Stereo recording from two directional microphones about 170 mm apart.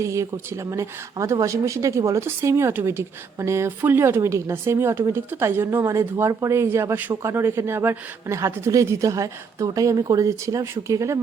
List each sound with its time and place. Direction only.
0.0 s a woman's voice: 15° right (ahead or behind)